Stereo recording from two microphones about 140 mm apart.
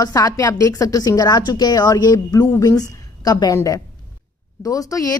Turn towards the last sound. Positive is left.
turn(degrees=25)  # may be behind; listen again after turning